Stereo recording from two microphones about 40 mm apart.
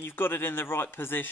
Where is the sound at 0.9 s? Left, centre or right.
Left.